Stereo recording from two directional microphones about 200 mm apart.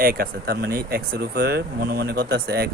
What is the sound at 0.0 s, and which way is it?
Speech, 45° right (ahead or behind).